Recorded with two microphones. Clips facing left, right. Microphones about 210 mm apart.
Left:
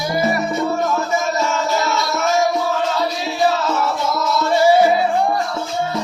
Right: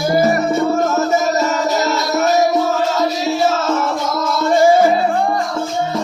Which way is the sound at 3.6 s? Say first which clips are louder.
Right 2 dB; 50° right (ahead or behind).